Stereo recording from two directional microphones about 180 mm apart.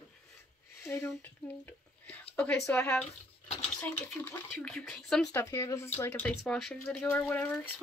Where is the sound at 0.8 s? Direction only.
10° left (ahead or behind).